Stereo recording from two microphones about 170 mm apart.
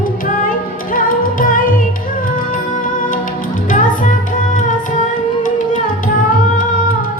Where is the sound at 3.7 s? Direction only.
50° left (ahead or behind).